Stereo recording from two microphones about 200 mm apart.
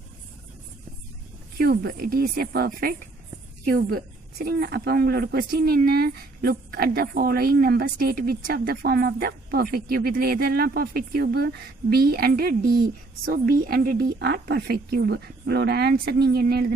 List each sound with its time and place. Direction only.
1.6 s speech: 50° right (ahead or behind)
4.5 s speech: 55° right (ahead or behind)